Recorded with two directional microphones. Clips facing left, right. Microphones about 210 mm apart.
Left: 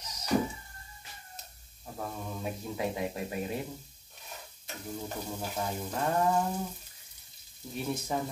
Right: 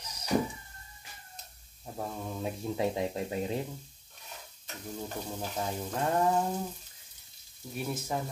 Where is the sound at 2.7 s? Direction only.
25° right (ahead or behind).